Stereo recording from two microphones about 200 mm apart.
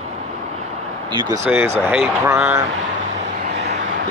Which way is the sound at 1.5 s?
10° right (ahead or behind).